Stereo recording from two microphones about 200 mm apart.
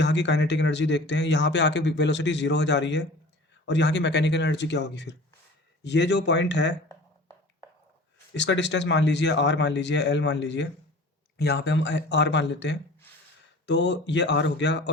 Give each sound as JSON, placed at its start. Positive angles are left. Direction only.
{"t": 0.0, "sound": "speech", "side_deg": 60}
{"t": 8.3, "sound": "speech", "side_deg": 65}